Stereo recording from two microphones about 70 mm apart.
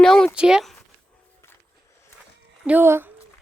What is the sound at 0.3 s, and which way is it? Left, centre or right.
Speech, centre.